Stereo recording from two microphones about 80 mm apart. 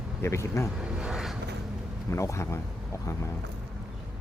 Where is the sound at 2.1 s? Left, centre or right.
Left.